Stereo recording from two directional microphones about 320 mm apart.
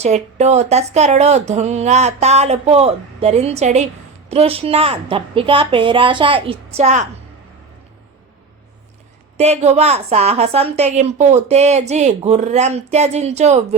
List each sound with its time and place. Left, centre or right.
0.0 s a woman's voice: right
9.4 s a woman's voice: centre